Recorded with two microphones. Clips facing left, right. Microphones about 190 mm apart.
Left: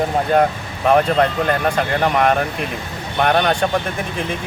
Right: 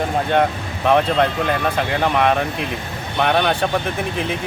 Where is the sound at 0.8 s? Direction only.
Centre (ahead or behind).